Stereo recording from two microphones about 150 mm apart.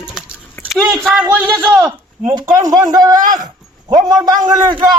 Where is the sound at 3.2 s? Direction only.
65° right (ahead or behind).